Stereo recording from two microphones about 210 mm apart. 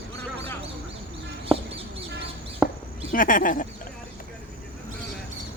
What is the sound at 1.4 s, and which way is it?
Bird, 25° right (ahead or behind).